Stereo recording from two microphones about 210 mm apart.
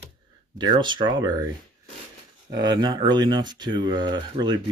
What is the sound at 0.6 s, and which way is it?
Speech, 20° right (ahead or behind).